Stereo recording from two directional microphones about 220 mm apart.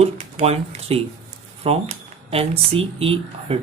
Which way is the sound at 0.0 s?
30° right (ahead or behind).